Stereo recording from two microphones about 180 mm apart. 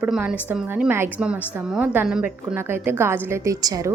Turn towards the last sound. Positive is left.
turn(degrees=-20)  # may be behind; listen again after turning